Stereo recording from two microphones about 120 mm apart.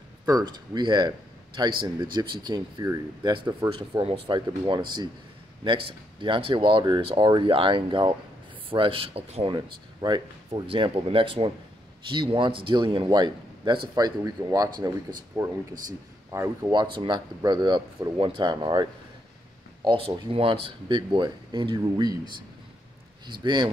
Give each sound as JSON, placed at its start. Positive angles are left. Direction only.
{"t": 0.3, "sound": "a man's voice", "side_deg": -35}
{"t": 9.6, "sound": "speech", "side_deg": -40}
{"t": 16.7, "sound": "speech", "side_deg": -40}
{"t": 19.8, "sound": "speech", "side_deg": -50}